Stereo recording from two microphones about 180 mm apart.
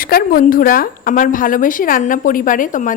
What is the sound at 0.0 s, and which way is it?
A woman's voice, 55° left (ahead or behind).